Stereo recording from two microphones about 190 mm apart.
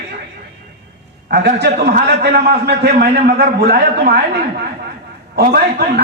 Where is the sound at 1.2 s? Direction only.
55° right (ahead or behind).